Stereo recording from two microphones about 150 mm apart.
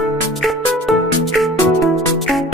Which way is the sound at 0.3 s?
Centre (ahead or behind).